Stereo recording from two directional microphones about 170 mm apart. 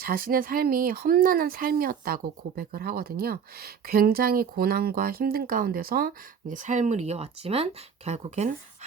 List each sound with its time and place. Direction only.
0.0 s speech: 55° right (ahead or behind); by 8.9 s 40° right (ahead or behind)